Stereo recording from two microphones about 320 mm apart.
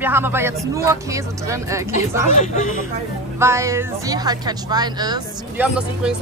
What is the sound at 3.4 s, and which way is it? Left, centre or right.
Speech, centre.